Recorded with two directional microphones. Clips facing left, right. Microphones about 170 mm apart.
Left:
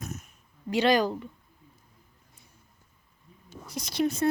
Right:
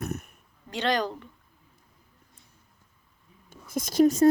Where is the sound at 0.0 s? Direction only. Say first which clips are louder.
Right 6 dB; 60° right (ahead or behind).